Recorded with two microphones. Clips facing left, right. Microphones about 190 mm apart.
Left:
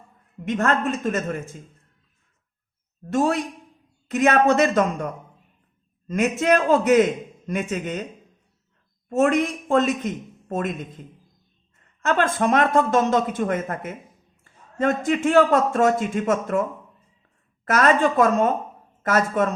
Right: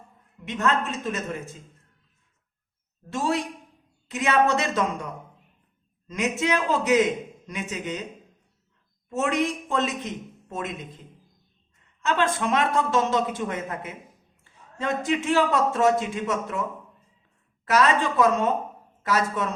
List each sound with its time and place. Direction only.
0.4 s a man's voice: 55° left (ahead or behind)
3.1 s a man's voice: 55° left (ahead or behind)
9.0 s a woman's voice: 55° left (ahead or behind)
12.0 s a man's voice: 50° left (ahead or behind)
17.7 s a man's voice: 50° left (ahead or behind)